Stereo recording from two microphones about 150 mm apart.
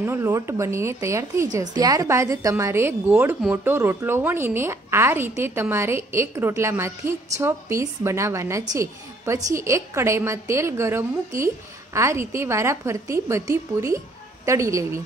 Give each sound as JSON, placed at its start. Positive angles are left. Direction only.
{"t": 0.0, "sound": "a woman's voice", "side_deg": -20}